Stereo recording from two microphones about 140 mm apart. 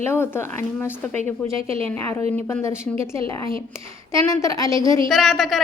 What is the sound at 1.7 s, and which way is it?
Speech, 45° right (ahead or behind).